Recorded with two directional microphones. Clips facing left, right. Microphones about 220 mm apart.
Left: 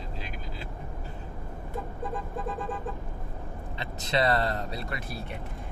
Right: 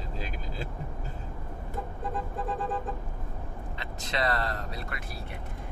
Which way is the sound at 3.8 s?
30° left (ahead or behind).